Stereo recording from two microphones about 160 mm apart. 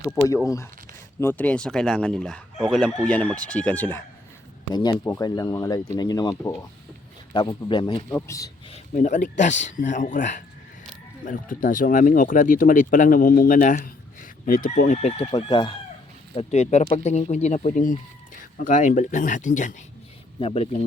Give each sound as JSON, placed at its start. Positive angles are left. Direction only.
{"t": 0.4, "sound": "speech", "side_deg": 20}
{"t": 4.7, "sound": "speech", "side_deg": 25}
{"t": 8.7, "sound": "speech", "side_deg": 45}
{"t": 14.9, "sound": "speech", "side_deg": 35}
{"t": 16.3, "sound": "speech", "side_deg": 40}
{"t": 20.4, "sound": "speech", "side_deg": 35}